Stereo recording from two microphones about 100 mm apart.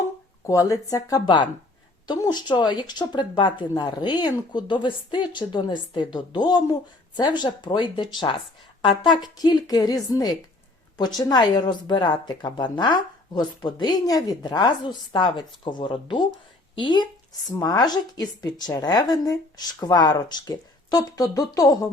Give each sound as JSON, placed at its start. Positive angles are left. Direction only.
{"t": 0.4, "sound": "speech", "side_deg": 35}
{"t": 1.2, "sound": "a woman's voice", "side_deg": 50}